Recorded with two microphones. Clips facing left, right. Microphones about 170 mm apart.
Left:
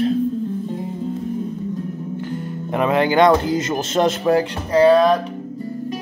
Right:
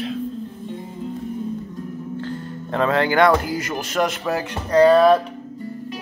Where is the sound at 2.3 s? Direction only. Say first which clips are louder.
Left 3 dB; 15° left (ahead or behind).